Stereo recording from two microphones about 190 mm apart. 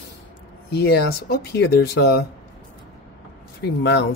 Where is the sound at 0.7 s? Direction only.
60° left (ahead or behind).